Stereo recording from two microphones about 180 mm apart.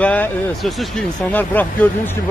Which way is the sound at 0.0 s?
10° left (ahead or behind).